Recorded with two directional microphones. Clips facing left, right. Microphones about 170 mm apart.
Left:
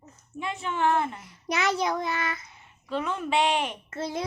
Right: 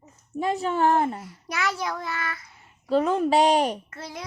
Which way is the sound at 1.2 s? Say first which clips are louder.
Left 2 dB; 20° left (ahead or behind).